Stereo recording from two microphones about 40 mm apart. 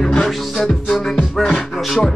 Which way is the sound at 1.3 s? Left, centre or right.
Centre.